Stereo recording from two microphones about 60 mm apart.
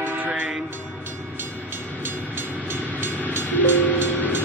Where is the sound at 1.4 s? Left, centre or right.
Right.